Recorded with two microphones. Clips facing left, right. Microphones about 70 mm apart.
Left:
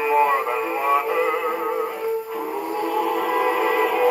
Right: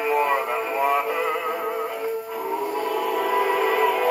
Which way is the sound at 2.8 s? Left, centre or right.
Centre.